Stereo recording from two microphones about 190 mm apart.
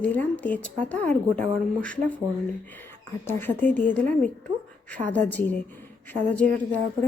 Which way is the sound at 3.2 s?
10° left (ahead or behind).